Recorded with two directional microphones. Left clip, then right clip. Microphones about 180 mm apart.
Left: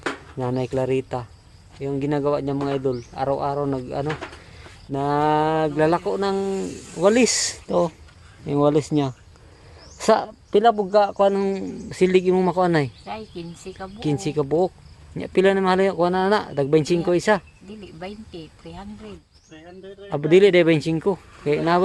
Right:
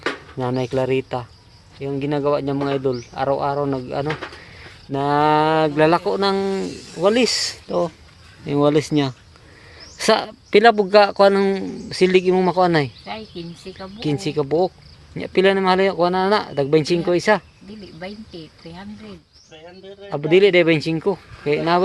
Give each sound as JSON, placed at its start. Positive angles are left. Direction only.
{"t": 0.0, "sound": "speech", "side_deg": 0}
{"t": 6.9, "sound": "speech", "side_deg": 20}
{"t": 8.4, "sound": "speech", "side_deg": 5}
{"t": 10.6, "sound": "speech", "side_deg": -35}
{"t": 10.9, "sound": "speech", "side_deg": -15}
{"t": 13.1, "sound": "speech", "side_deg": -5}
{"t": 14.0, "sound": "speech", "side_deg": 10}
{"t": 20.1, "sound": "speech", "side_deg": 20}